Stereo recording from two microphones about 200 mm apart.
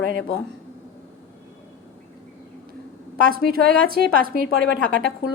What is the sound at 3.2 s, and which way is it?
A woman's voice, 50° right (ahead or behind).